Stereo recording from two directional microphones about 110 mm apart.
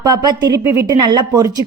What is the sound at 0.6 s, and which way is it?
Speech, 25° right (ahead or behind).